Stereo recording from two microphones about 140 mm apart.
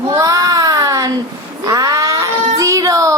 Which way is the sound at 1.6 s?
25° right (ahead or behind).